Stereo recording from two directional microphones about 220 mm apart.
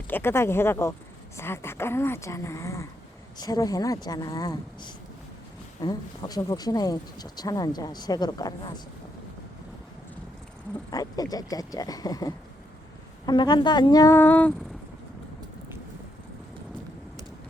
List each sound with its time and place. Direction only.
0.1 s speech: 10° left (ahead or behind)
10.9 s speech: 15° left (ahead or behind)